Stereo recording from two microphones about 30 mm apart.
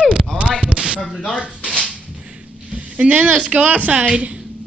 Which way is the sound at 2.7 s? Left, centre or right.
Right.